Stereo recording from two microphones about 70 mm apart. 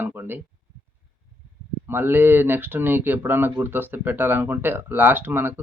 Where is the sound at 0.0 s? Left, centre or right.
Right.